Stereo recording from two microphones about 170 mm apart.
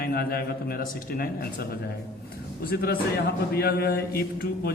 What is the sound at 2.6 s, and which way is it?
A man's voice, 65° left (ahead or behind).